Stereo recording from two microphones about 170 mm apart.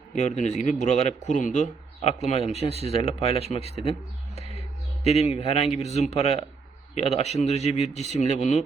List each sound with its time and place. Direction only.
0.1 s a man's voice: 45° left (ahead or behind)
2.7 s speech: 35° right (ahead or behind)
3.0 s a man's voice: 35° left (ahead or behind)
5.0 s a man's voice: 35° left (ahead or behind)
8.0 s speech: 40° right (ahead or behind)
8.3 s a man's voice: 40° left (ahead or behind)